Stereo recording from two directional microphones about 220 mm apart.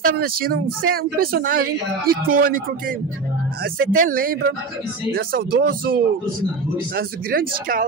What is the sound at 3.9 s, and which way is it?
Speech, 40° right (ahead or behind).